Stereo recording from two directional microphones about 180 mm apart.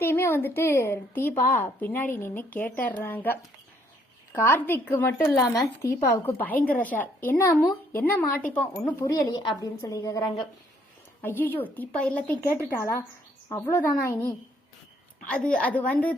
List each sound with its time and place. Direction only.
0.0 s a woman's voice: 15° left (ahead or behind)